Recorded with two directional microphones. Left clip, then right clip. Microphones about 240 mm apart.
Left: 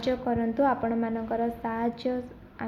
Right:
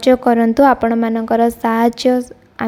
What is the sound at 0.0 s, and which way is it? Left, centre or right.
A woman's voice, right.